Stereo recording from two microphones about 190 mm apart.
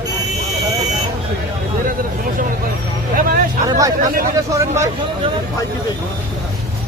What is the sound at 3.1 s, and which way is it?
Speech, 45° right (ahead or behind).